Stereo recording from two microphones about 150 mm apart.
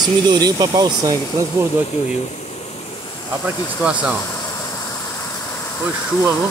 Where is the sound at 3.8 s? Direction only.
5° right (ahead or behind).